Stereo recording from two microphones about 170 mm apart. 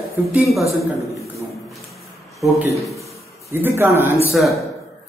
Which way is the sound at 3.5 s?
15° right (ahead or behind).